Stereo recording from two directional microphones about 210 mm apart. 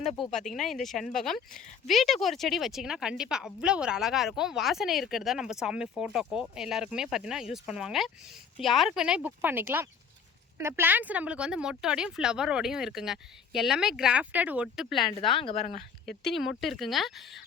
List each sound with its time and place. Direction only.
0.2 s speech: centre (ahead or behind)
15.2 s a woman's voice: 25° left (ahead or behind)
16.3 s speech: centre (ahead or behind)